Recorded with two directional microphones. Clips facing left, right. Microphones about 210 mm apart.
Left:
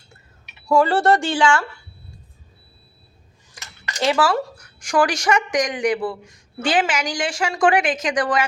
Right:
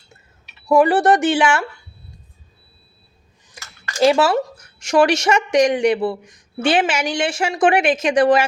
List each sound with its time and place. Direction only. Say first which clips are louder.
0.7 s speech: right 3 dB; 20° right (ahead or behind)
3.6 s a sound: right 3 dB; 20° left (ahead or behind)
4.0 s speech: right 5 dB; 25° right (ahead or behind)